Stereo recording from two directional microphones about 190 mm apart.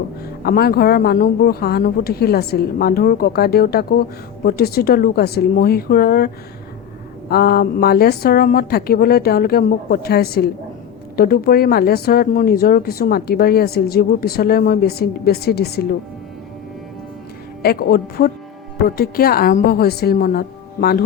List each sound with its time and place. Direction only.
0.4 s a woman's voice: 55° left (ahead or behind)
17.6 s speech: 55° left (ahead or behind)